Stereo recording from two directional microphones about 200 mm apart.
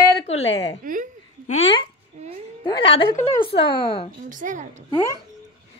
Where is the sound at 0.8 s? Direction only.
40° right (ahead or behind).